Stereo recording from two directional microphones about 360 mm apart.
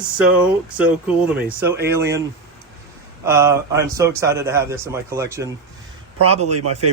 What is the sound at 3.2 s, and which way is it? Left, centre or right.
A man's voice, centre.